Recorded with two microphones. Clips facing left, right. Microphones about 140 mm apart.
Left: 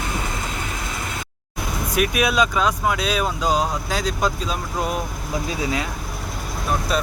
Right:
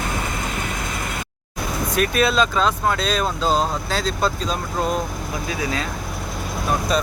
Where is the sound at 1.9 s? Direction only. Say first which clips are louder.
Right 1 dB; 10° left (ahead or behind).